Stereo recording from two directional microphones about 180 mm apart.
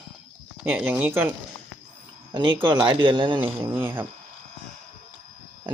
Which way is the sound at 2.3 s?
25° right (ahead or behind).